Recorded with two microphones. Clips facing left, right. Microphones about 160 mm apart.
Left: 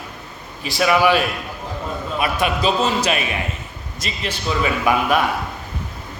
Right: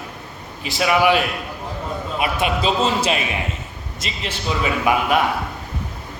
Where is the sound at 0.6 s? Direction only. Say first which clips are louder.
Left 1 dB; 20° right (ahead or behind).